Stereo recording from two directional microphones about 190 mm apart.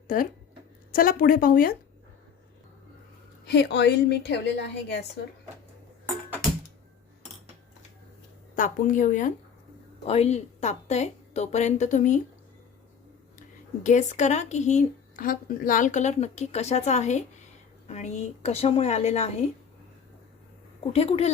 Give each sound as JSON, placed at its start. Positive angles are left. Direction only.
{"t": 0.1, "sound": "speech", "side_deg": 45}
{"t": 3.4, "sound": "a woman's voice", "side_deg": 60}
{"t": 8.5, "sound": "speech", "side_deg": 45}
{"t": 13.8, "sound": "speech", "side_deg": 40}
{"t": 20.9, "sound": "speech", "side_deg": 30}